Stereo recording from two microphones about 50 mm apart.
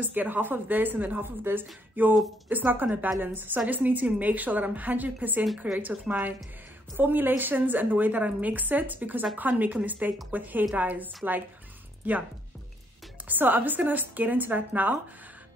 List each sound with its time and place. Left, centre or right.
0.0 s a woman's voice: right
13.3 s a woman's voice: right